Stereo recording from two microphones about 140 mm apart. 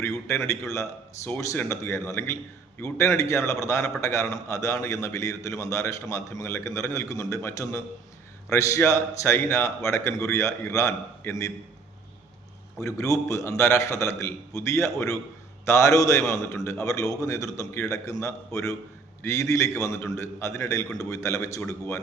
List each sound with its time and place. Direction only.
0.5 s a man's voice: 20° left (ahead or behind)
12.8 s a man's voice: 20° left (ahead or behind)